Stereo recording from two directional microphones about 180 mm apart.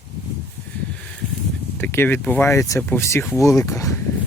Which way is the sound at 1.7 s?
10° left (ahead or behind).